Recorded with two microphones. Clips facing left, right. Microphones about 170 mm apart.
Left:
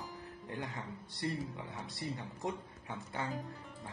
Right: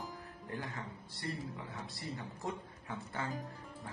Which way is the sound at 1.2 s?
20° left (ahead or behind).